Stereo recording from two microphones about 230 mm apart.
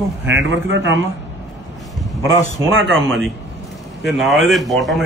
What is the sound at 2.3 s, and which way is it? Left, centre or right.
Speech, right.